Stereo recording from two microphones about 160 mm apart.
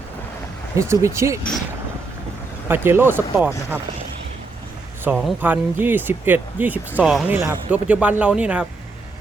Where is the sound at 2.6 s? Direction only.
15° right (ahead or behind).